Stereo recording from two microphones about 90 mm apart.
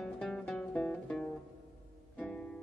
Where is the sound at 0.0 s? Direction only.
5° left (ahead or behind).